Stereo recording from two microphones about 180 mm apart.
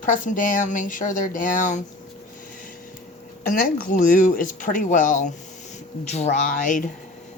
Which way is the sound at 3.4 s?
50° left (ahead or behind).